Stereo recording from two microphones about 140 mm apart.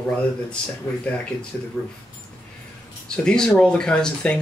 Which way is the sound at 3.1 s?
5° left (ahead or behind).